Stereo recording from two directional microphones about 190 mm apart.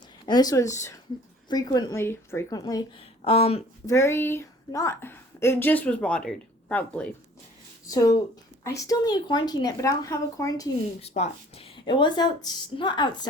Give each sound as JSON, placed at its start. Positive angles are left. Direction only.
{"t": 0.3, "sound": "a woman's voice", "side_deg": 20}
{"t": 3.2, "sound": "speech", "side_deg": 30}
{"t": 3.8, "sound": "a woman's voice", "side_deg": 15}
{"t": 7.9, "sound": "a woman's voice", "side_deg": 20}
{"t": 11.0, "sound": "a woman's voice", "side_deg": 35}